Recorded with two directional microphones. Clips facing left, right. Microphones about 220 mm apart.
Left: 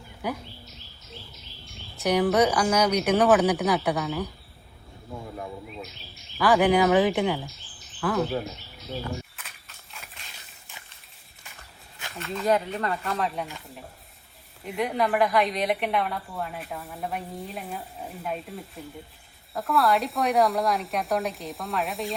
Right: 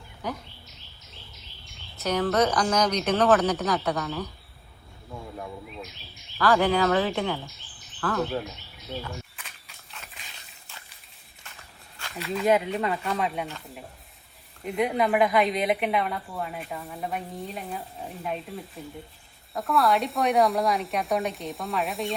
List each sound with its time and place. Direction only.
0.2 s speech: 10° left (ahead or behind)
2.0 s speech: 15° left (ahead or behind)
6.4 s speech: 15° left (ahead or behind)
9.3 s horse: centre (ahead or behind)
12.1 s a woman's voice: centre (ahead or behind)
14.6 s a woman's voice: centre (ahead or behind)